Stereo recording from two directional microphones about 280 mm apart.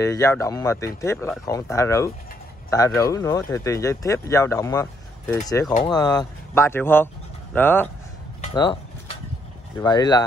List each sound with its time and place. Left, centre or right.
0.0 s speech: centre
8.4 s a sound: centre
9.8 s speech: centre